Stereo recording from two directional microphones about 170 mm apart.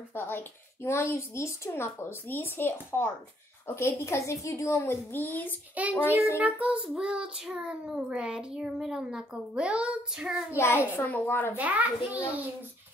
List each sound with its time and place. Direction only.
0.1 s speech: 10° left (ahead or behind)
5.8 s a child's voice: 10° right (ahead or behind)
6.3 s child singing: 10° right (ahead or behind)
10.5 s speech: 15° left (ahead or behind)
11.5 s a child's voice: 10° right (ahead or behind)